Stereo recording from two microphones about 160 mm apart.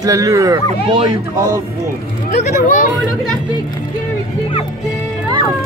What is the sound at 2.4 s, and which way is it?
Speech, 55° left (ahead or behind).